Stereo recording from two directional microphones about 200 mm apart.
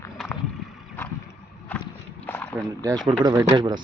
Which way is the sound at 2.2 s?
10° left (ahead or behind).